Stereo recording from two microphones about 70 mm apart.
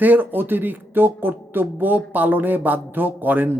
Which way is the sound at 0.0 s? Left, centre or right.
Right.